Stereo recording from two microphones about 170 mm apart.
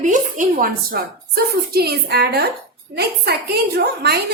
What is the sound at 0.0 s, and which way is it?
A woman's voice, 50° right (ahead or behind).